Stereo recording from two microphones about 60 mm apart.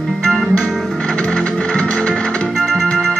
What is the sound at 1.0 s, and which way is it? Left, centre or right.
Music, left.